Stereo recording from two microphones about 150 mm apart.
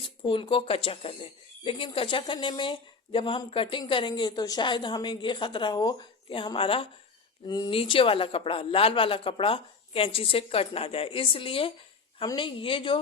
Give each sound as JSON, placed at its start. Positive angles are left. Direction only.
{"t": 0.0, "sound": "speech", "side_deg": 35}